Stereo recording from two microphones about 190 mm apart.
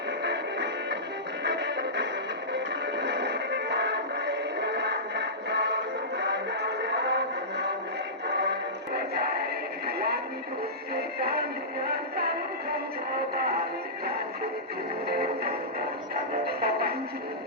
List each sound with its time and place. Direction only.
0.2 s music: 65° right (ahead or behind)
15.0 s music: 55° right (ahead or behind)